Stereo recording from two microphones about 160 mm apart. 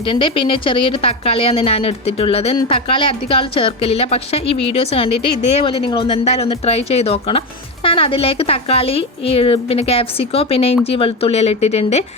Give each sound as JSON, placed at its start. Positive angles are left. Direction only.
{"t": 0.0, "sound": "speech", "side_deg": 30}